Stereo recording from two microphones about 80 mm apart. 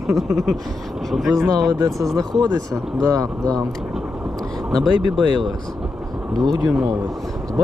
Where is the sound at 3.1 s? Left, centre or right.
Right.